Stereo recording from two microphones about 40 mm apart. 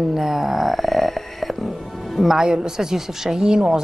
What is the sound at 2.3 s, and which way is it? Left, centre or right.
A woman's voice, centre.